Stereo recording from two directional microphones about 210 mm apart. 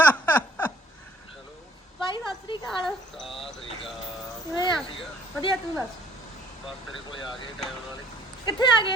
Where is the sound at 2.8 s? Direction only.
Centre (ahead or behind).